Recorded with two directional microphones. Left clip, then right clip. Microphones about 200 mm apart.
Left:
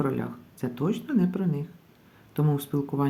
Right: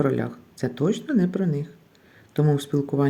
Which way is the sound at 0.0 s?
20° right (ahead or behind).